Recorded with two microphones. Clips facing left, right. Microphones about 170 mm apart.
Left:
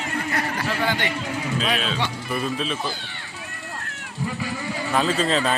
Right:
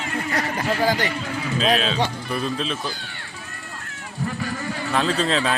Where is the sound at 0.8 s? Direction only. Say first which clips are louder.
Right 4 dB; 35° right (ahead or behind).